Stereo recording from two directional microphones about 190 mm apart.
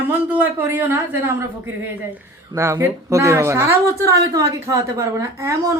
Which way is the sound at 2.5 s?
15° right (ahead or behind).